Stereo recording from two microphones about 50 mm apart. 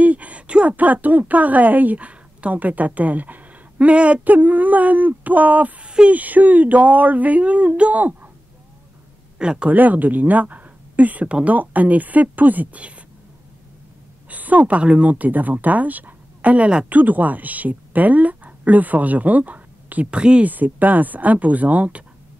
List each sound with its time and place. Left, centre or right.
0.0 s a sound: right
0.7 s speech: right
6.1 s speech: right
9.4 s speech: centre
9.7 s speech: right
14.3 s speech: right
20.4 s speech: right